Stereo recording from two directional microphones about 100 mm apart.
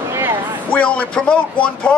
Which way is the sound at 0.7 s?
10° left (ahead or behind).